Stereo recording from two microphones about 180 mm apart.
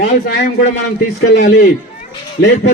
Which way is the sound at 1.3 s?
70° left (ahead or behind).